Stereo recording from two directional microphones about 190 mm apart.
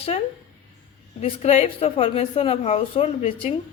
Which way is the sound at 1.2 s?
30° left (ahead or behind).